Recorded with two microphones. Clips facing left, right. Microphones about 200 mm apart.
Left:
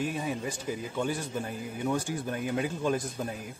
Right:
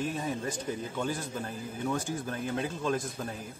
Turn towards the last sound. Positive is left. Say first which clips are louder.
# left 2 dB
turn(degrees=15)  # may be behind; listen again after turning